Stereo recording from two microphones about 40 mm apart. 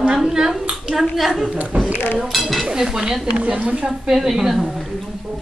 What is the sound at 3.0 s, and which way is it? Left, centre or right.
Speech, right.